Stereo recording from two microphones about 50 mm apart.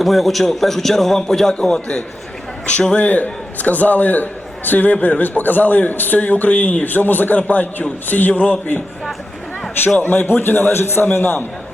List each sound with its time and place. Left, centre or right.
0.0 s a man's voice: centre
2.9 s a man's voice: left
10.0 s a man's voice: left